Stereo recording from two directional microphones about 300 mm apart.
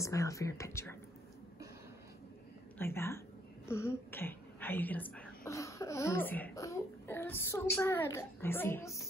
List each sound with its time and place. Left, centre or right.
0.0 s speech: centre
2.8 s speech: centre